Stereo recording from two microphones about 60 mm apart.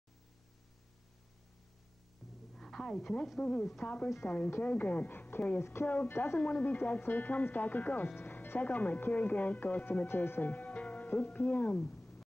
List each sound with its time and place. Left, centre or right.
2.5 s a sound: centre
3.3 s speech: centre
3.8 s speech: left
5.6 s speech: left
6.4 s speech: left
10.0 s speech: left
10.5 s music: left